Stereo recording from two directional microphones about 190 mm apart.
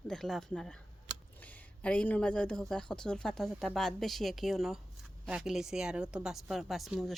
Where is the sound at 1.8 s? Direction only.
5° left (ahead or behind).